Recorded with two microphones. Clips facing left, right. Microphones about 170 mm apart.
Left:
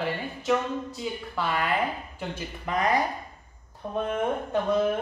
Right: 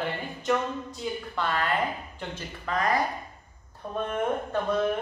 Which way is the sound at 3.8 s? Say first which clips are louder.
Left 1 dB; 5° left (ahead or behind).